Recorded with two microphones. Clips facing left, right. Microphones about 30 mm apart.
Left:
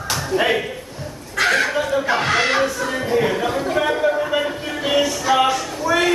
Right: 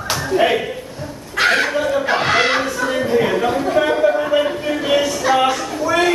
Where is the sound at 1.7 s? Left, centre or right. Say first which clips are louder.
Right 2 dB; centre.